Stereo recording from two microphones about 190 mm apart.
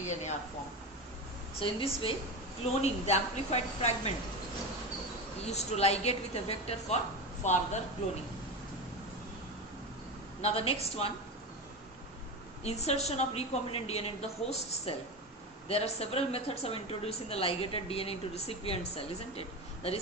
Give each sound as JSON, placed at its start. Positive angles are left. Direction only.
{"t": 1.5, "sound": "a woman's voice", "side_deg": 30}
{"t": 5.5, "sound": "a woman's voice", "side_deg": 35}
{"t": 10.4, "sound": "a woman's voice", "side_deg": 30}
{"t": 12.6, "sound": "a woman's voice", "side_deg": 35}